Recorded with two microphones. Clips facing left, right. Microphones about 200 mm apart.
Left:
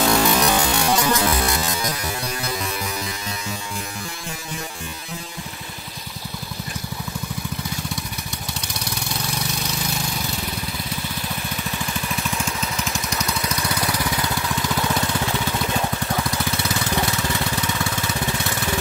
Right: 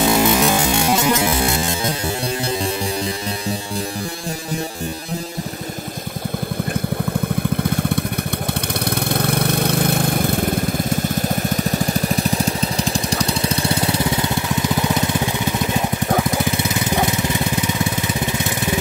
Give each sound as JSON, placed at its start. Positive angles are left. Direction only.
{"t": 0.0, "sound": "music", "side_deg": -20}
{"t": 8.9, "sound": "vehicle", "side_deg": -55}
{"t": 16.8, "sound": "lawn mower", "side_deg": -20}